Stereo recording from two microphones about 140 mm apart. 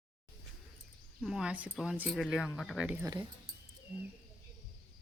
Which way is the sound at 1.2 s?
5° right (ahead or behind).